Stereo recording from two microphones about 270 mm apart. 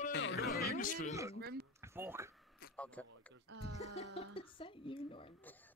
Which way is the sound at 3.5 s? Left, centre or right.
Right.